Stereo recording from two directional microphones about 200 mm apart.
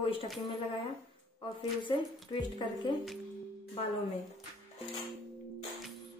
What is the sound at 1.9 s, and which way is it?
Speech, 20° left (ahead or behind).